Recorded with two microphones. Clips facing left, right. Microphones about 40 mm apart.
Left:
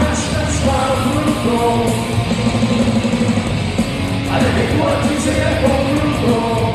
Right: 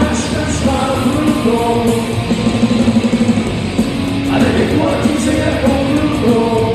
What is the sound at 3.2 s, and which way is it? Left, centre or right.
Music, left.